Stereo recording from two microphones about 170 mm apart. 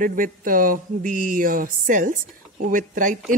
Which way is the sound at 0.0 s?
55° right (ahead or behind).